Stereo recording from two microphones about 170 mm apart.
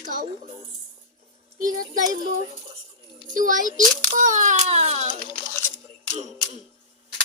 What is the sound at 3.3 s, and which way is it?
Speech, 50° right (ahead or behind).